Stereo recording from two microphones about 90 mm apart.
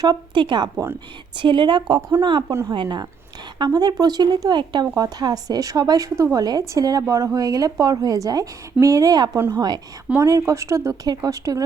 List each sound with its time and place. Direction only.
0.3 s a woman's voice: 60° right (ahead or behind)
2.0 s speech: 35° right (ahead or behind)
2.7 s a woman's voice: 60° right (ahead or behind)
3.6 s speech: 50° right (ahead or behind)
4.9 s speech: 45° right (ahead or behind)
10.2 s speech: 35° right (ahead or behind)